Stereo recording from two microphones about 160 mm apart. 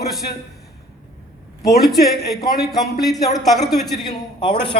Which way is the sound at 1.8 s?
Centre (ahead or behind).